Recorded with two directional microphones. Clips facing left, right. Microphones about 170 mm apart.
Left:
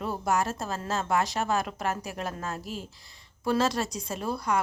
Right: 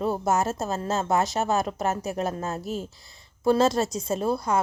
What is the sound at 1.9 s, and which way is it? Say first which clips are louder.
A woman's voice: right 6 dB; 25° right (ahead or behind).